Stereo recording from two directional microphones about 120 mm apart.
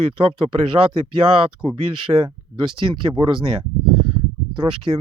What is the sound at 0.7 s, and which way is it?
Speech, 35° right (ahead or behind).